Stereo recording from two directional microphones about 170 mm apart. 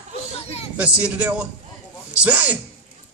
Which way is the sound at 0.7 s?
5° right (ahead or behind).